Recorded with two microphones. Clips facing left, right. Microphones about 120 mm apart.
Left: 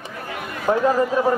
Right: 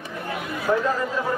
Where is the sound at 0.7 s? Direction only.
45° left (ahead or behind).